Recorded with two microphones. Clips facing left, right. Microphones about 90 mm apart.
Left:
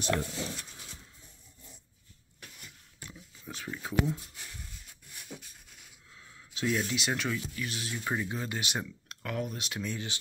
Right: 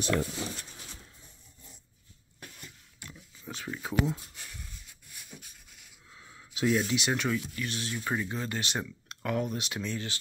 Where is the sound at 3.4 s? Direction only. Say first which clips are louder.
Right 2 dB; centre (ahead or behind).